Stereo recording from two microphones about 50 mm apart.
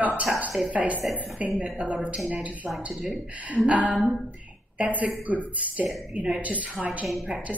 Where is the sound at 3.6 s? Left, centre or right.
Right.